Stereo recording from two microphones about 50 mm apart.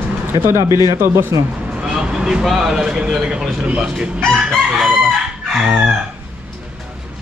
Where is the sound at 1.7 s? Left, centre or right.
Centre.